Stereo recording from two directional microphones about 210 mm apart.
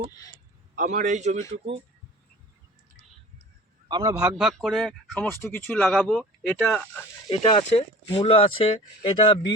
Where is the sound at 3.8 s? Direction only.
20° right (ahead or behind).